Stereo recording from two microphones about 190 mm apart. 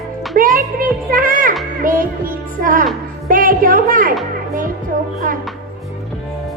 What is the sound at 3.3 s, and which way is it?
Speech, 45° right (ahead or behind).